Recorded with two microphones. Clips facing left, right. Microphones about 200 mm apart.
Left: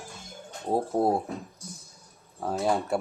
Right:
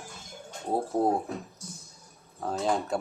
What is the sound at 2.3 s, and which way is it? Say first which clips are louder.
Speech: left 2 dB; 10° left (ahead or behind).